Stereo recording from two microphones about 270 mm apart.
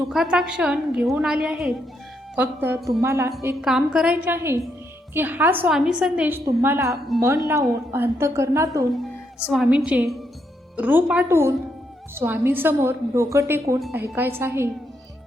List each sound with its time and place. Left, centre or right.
0.1 s a woman's voice: centre